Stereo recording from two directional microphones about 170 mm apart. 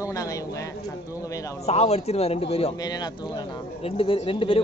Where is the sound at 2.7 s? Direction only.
25° left (ahead or behind).